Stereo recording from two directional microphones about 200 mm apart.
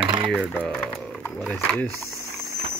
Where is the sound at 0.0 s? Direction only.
25° right (ahead or behind).